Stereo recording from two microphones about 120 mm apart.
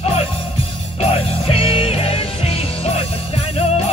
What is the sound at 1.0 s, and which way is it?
Music, 55° left (ahead or behind).